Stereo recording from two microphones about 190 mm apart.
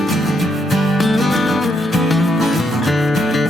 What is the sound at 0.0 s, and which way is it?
Music, centre (ahead or behind).